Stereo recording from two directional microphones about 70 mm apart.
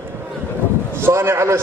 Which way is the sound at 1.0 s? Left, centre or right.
Right.